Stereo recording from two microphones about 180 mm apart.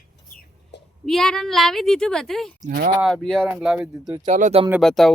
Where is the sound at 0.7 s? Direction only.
70° left (ahead or behind).